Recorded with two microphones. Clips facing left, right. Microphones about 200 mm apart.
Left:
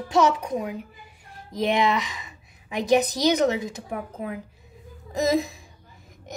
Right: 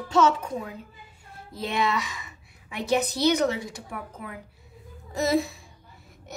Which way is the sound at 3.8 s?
40° left (ahead or behind).